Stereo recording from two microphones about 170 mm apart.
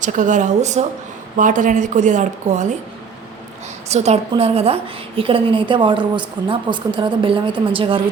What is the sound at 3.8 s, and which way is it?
A woman's voice, 40° right (ahead or behind).